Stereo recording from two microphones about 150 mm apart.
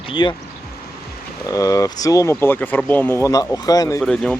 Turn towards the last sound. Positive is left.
turn(degrees=5)  # may be behind; listen again after turning